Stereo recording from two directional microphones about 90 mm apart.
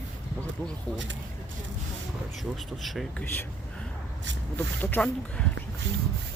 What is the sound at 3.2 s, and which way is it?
Speech, 20° left (ahead or behind).